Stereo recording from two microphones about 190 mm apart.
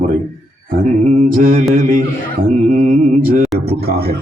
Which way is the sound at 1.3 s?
45° right (ahead or behind).